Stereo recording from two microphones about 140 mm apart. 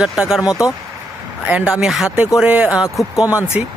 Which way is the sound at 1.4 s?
10° right (ahead or behind).